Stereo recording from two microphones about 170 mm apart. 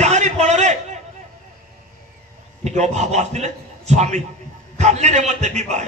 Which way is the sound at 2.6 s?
40° right (ahead or behind).